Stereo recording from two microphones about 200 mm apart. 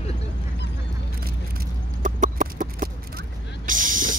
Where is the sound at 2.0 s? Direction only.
40° right (ahead or behind).